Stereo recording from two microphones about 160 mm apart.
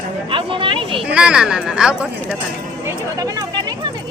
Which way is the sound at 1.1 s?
5° right (ahead or behind).